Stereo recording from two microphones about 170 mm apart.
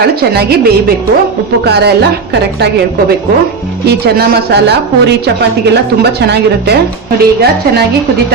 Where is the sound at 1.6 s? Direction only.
70° right (ahead or behind).